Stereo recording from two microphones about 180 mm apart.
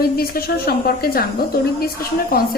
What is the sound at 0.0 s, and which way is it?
A woman's voice, 60° left (ahead or behind).